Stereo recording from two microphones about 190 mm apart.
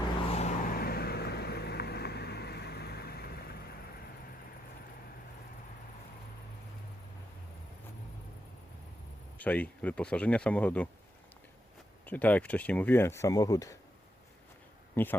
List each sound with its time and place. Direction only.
0.3 s vehicle: 35° left (ahead or behind); by 3.8 s 55° left (ahead or behind)
9.4 s speech: 10° left (ahead or behind)
12.0 s speech: 10° left (ahead or behind)
15.0 s speech: 10° left (ahead or behind)